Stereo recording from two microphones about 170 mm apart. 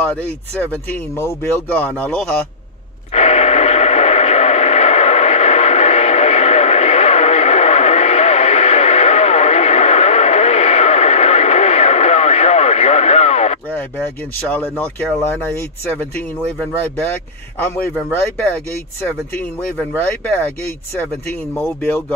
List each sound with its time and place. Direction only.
0.0 s speech: 10° left (ahead or behind)
3.1 s radio: 40° left (ahead or behind)
13.7 s a sound: 10° left (ahead or behind)
14.5 s speech: 10° left (ahead or behind)
19.9 s speech: 10° left (ahead or behind)
21.5 s speech: 5° left (ahead or behind)